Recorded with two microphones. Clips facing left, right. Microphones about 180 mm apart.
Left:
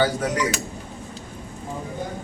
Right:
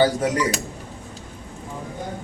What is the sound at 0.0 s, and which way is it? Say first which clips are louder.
Speech: right 3 dB; 30° right (ahead or behind).